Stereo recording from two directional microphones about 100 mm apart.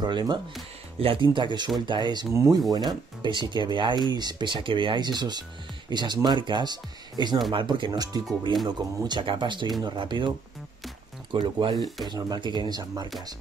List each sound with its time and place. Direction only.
0.0 s speech: 45° right (ahead or behind)
0.9 s speech: 65° right (ahead or behind)
2.3 s speech: 30° right (ahead or behind)
2.9 s speech: 50° right (ahead or behind)
7.5 s speech: 55° right (ahead or behind)
11.3 s speech: 55° right (ahead or behind)
12.1 s speech: 45° right (ahead or behind)